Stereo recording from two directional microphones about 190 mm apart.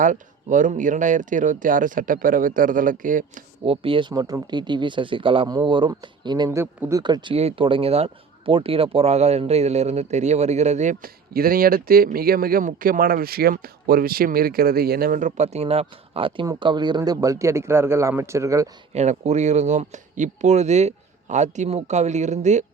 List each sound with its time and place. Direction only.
0.0 s speech: 40° right (ahead or behind)
3.6 s speech: 30° right (ahead or behind)
18.9 s speech: 35° right (ahead or behind)